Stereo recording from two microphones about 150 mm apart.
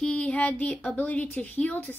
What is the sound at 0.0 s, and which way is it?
A woman's voice, 10° left (ahead or behind).